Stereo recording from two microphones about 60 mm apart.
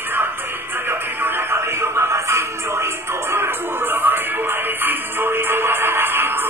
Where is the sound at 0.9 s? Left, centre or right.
Right.